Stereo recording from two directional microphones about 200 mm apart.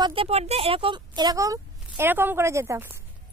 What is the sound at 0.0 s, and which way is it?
Speech, 25° right (ahead or behind).